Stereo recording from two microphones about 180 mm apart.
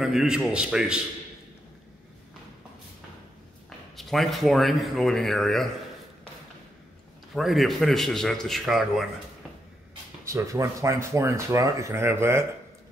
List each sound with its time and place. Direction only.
0.0 s speech: 5° right (ahead or behind)
3.9 s speech: centre (ahead or behind)
7.3 s speech: centre (ahead or behind)
10.2 s speech: 15° right (ahead or behind)